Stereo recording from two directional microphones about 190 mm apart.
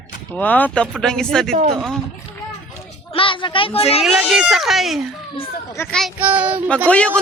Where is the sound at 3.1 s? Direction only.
25° left (ahead or behind).